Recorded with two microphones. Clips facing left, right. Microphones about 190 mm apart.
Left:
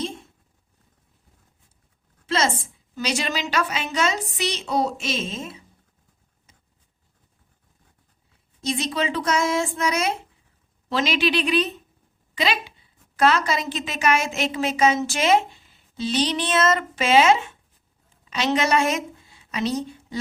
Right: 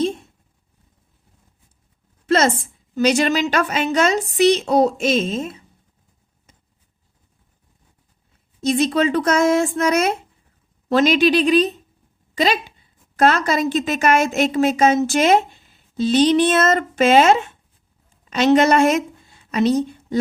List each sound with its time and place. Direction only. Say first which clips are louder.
2.2 s a sound: right 6 dB; 55° right (ahead or behind)
2.9 s a woman's voice: right 10 dB; 45° right (ahead or behind)
8.6 s a woman's voice: right 8 dB; 50° right (ahead or behind)